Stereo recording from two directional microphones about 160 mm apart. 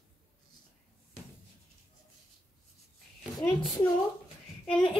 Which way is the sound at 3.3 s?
15° left (ahead or behind).